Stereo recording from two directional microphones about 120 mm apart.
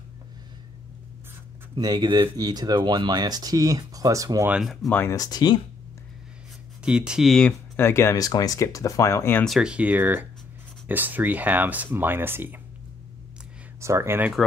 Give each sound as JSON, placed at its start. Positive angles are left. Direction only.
{"t": 1.8, "sound": "speech", "side_deg": -35}
{"t": 4.5, "sound": "speech", "side_deg": -5}
{"t": 4.8, "sound": "speech", "side_deg": 20}
{"t": 5.2, "sound": "speech", "side_deg": 35}
{"t": 6.8, "sound": "speech", "side_deg": -5}
{"t": 7.7, "sound": "speech", "side_deg": 20}
{"t": 9.6, "sound": "speech", "side_deg": -10}
{"t": 13.7, "sound": "speech", "side_deg": -25}